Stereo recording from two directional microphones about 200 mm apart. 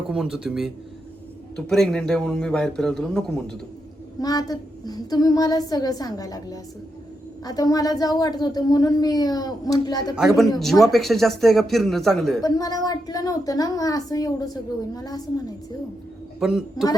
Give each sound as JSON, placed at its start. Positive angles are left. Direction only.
{"t": 0.1, "sound": "a man's voice", "side_deg": -5}
{"t": 4.2, "sound": "speech", "side_deg": 20}
{"t": 10.2, "sound": "a man's voice", "side_deg": 0}
{"t": 12.4, "sound": "a woman's voice", "side_deg": 20}
{"t": 16.4, "sound": "a man's voice", "side_deg": 0}